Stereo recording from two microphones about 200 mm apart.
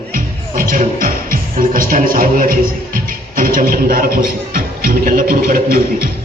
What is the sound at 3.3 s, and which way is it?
A man's voice, 45° right (ahead or behind).